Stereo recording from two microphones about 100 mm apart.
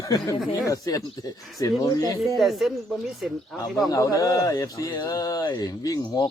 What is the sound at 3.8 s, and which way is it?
Speech, 35° left (ahead or behind).